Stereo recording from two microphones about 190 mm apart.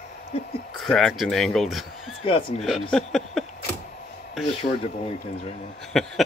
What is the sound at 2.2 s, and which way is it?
Speech, 25° left (ahead or behind).